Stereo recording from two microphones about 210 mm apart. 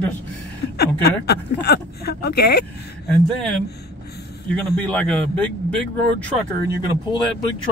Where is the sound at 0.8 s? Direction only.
50° left (ahead or behind).